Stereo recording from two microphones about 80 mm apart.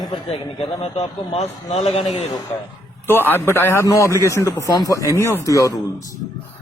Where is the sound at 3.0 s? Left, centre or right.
Left.